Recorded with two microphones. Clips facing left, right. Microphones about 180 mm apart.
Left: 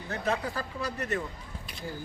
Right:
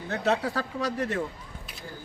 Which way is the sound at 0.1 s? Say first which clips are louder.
Right 4 dB; 85° right.